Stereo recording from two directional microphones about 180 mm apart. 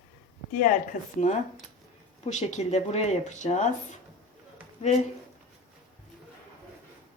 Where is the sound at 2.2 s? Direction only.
40° left (ahead or behind).